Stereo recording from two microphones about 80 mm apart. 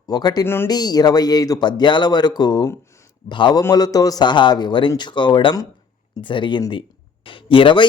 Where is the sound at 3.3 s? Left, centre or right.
Left.